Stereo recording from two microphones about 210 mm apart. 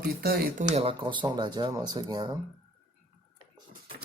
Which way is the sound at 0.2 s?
45° right (ahead or behind).